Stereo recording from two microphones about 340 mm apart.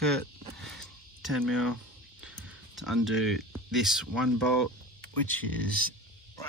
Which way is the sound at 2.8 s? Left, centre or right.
Centre.